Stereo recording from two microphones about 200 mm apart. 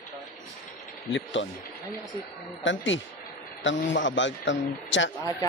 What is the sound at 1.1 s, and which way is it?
Speech, 70° left (ahead or behind).